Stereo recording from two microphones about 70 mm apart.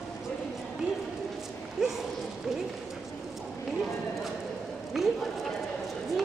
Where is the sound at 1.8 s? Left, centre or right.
Centre.